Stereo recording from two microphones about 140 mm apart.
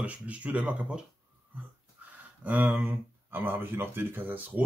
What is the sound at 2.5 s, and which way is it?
Speech, 15° right (ahead or behind).